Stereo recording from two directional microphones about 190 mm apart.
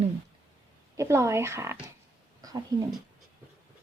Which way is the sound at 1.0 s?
15° right (ahead or behind).